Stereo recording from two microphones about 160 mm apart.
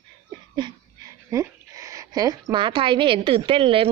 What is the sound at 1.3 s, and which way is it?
A woman's voice, 20° right (ahead or behind).